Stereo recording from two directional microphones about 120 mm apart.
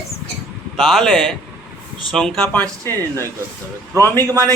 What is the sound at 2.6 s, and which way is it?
Speech, 15° left (ahead or behind).